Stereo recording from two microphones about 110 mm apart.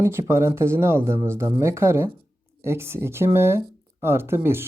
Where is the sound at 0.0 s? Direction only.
25° right (ahead or behind).